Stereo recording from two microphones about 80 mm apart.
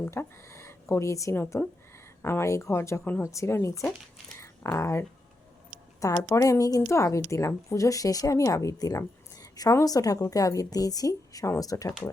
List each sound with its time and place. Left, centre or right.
0.1 s speech: left
3.0 s speech: left
3.2 s speech: left
4.4 s a sound: left
6.0 s speech: left